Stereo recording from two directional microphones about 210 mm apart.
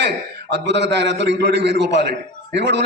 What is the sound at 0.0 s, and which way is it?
A man's voice, 55° right (ahead or behind).